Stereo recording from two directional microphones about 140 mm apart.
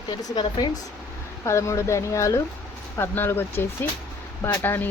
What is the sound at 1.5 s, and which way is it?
Speech, 20° left (ahead or behind).